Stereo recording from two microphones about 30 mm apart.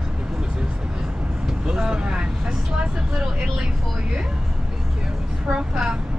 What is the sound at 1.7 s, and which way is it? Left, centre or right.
Speech, right.